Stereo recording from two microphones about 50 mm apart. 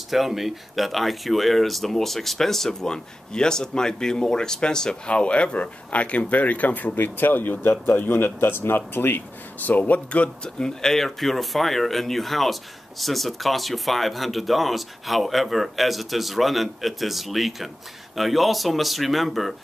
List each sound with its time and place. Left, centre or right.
0.1 s speech: centre; by 9.2 s left
9.7 s speech: left
10.6 s speech: centre